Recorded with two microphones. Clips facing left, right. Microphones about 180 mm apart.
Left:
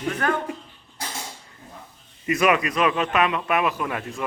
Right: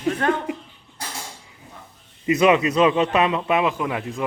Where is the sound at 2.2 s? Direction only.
20° right (ahead or behind).